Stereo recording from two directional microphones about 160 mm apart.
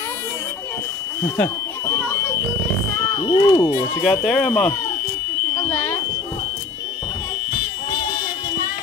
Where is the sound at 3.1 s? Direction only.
30° left (ahead or behind).